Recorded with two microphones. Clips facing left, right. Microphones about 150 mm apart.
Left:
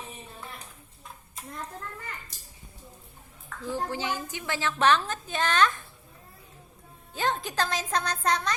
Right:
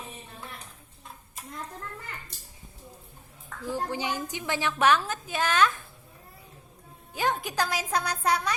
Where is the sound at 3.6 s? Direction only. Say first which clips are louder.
Even; 15° right (ahead or behind).